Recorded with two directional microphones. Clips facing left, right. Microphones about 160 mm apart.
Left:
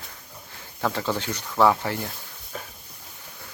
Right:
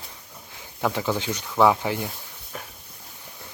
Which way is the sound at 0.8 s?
15° right (ahead or behind).